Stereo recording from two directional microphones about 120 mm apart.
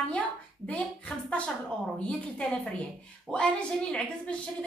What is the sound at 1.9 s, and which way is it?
A woman's voice, 5° left (ahead or behind).